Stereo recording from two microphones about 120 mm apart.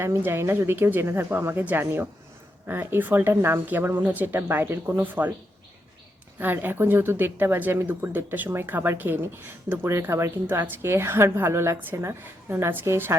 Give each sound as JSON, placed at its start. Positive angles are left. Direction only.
{"t": 0.0, "sound": "speech", "side_deg": -20}
{"t": 6.4, "sound": "speech", "side_deg": -15}